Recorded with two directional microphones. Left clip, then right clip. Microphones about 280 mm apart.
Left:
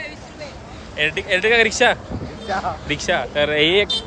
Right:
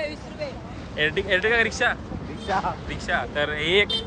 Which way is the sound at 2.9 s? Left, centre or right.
Left.